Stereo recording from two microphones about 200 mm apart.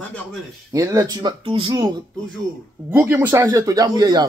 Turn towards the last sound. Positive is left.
turn(degrees=-20)  # may be behind; listen again after turning